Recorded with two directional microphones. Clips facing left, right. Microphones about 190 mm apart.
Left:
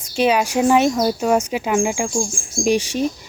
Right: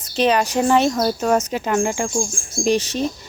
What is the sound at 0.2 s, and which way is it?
Speech, 10° left (ahead or behind).